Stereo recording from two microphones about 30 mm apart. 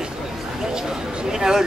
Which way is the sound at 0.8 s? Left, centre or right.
Right.